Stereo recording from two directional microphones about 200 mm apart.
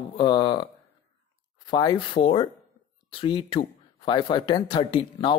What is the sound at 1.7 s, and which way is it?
Speech, 20° left (ahead or behind).